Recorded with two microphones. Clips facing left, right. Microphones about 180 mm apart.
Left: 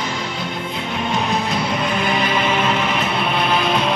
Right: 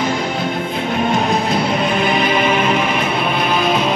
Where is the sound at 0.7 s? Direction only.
50° right (ahead or behind).